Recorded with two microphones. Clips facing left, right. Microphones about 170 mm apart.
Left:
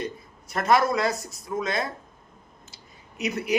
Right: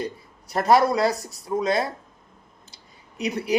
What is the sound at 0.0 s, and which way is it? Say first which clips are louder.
Speech: right 2 dB; 35° right (ahead or behind).